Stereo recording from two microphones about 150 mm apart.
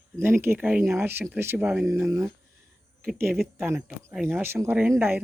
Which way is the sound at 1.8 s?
20° right (ahead or behind).